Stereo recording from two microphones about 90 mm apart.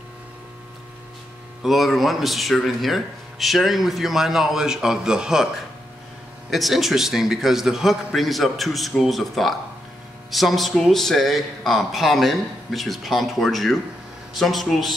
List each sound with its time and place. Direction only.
1.6 s speech: centre (ahead or behind)
6.5 s speech: centre (ahead or behind)